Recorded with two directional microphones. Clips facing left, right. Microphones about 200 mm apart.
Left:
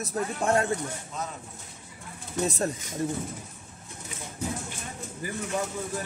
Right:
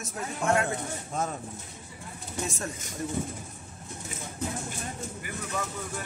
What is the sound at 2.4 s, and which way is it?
Speech, 35° left (ahead or behind).